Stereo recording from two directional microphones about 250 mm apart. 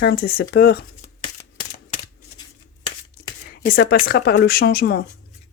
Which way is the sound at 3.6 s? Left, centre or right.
Left.